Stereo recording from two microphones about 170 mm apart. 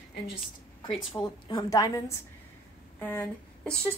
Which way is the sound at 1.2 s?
20° left (ahead or behind).